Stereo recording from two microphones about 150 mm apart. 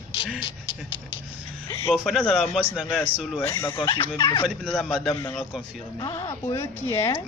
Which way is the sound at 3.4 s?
20° left (ahead or behind).